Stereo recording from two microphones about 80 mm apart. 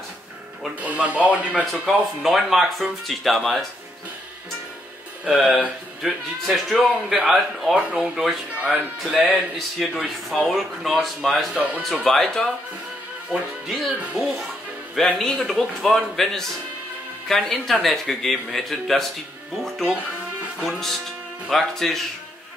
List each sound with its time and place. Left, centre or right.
0.7 s speech: centre
1.5 s speech: centre
5.2 s speech: centre
9.8 s speech: centre
11.5 s speech: centre
11.8 s speech: centre
20.6 s speech: centre